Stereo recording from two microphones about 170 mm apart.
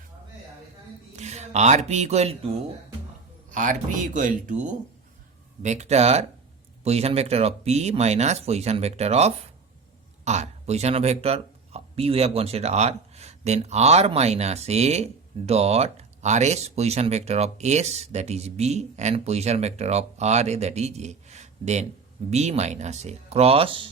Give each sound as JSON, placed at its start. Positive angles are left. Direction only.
{"t": 1.1, "sound": "speech", "side_deg": -40}
{"t": 3.5, "sound": "speech", "side_deg": -50}